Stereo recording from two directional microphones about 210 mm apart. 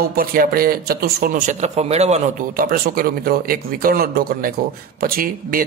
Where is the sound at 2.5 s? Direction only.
45° right (ahead or behind).